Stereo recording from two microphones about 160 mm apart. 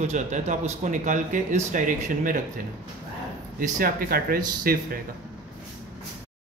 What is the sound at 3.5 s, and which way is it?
Speech, 60° right (ahead or behind).